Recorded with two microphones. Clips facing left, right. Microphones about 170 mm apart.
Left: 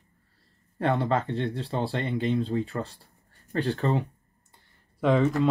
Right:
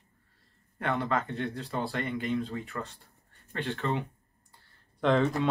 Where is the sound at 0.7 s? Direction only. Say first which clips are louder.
Left 5 dB; 30° left (ahead or behind).